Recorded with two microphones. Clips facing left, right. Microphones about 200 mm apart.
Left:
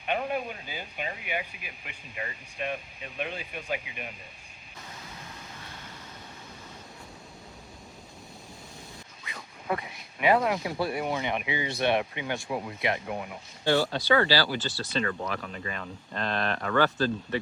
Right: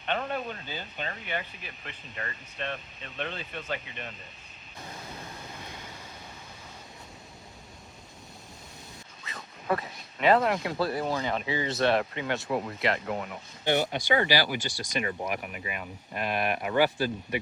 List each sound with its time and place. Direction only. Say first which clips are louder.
0.0 s speech: left 1 dB; 10° left (ahead or behind)
9.3 s a sound: right 2 dB; 15° left (ahead or behind)
10.3 s speech: right 1 dB; centre (ahead or behind)
10.7 s speech: right 1 dB; 25° left (ahead or behind)
13.7 s speech: left 2 dB; 20° right (ahead or behind)